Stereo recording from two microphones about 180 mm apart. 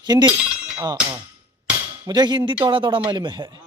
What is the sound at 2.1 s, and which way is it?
Speech, 25° right (ahead or behind).